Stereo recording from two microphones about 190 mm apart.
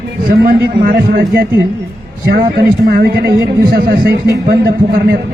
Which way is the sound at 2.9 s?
55° right (ahead or behind).